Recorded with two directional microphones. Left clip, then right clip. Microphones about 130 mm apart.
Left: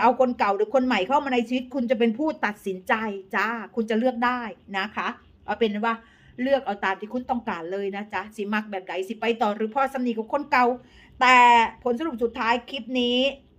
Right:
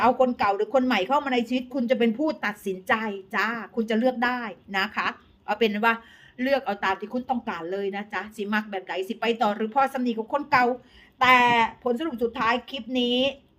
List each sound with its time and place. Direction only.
0.0 s a woman's voice: 15° left (ahead or behind); by 5.5 s 5° right (ahead or behind)
5.5 s a man's voice: 20° right (ahead or behind)
5.8 s speech: 35° right (ahead or behind)
6.7 s speech: 5° right (ahead or behind)
7.1 s a woman's voice: 10° left (ahead or behind)